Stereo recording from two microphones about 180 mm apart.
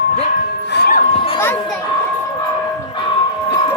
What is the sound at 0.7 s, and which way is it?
Music, 65° left (ahead or behind).